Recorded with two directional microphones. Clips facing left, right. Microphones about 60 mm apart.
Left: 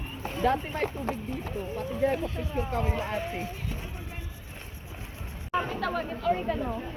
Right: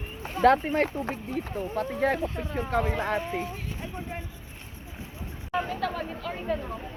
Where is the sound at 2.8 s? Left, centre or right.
Right.